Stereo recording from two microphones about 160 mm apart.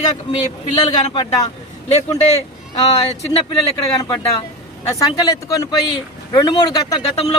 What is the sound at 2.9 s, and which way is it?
Speech, 40° left (ahead or behind).